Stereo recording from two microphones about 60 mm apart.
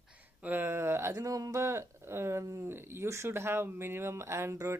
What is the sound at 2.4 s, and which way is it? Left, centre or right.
Speech, right.